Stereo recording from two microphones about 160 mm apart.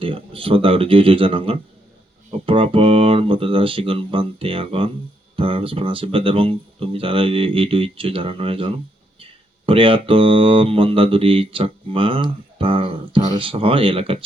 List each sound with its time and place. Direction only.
0.0 s speech: 35° right (ahead or behind)